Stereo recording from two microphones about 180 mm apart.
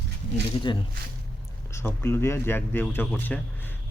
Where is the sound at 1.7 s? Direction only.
15° left (ahead or behind).